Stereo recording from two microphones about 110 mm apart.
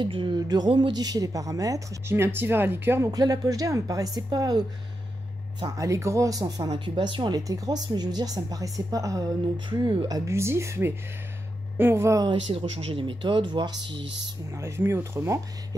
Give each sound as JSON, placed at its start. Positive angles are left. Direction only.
{"t": 0.0, "sound": "speech", "side_deg": -50}
{"t": 0.4, "sound": "speech", "side_deg": -40}
{"t": 3.1, "sound": "speech", "side_deg": -35}
{"t": 9.7, "sound": "speech", "side_deg": -40}
{"t": 12.4, "sound": "speech", "side_deg": -60}
{"t": 14.5, "sound": "speech", "side_deg": -25}